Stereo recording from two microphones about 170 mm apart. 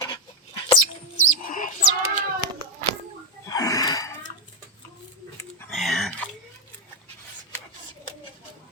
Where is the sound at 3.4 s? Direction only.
20° left (ahead or behind).